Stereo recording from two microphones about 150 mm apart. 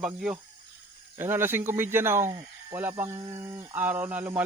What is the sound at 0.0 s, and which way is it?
Speech, 5° right (ahead or behind).